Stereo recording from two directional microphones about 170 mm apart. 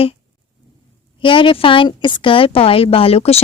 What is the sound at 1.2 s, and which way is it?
A woman's voice, 30° left (ahead or behind).